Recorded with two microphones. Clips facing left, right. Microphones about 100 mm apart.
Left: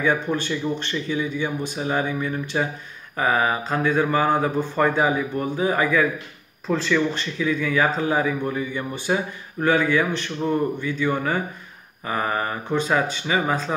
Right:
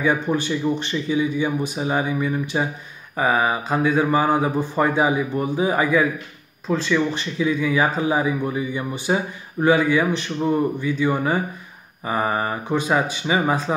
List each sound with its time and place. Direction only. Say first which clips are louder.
0.0 s speech: right 2 dB; 10° right (ahead or behind)
6.7 s speech: right 1 dB; 5° right (ahead or behind)
7.2 s speech: right 2 dB; 15° right (ahead or behind)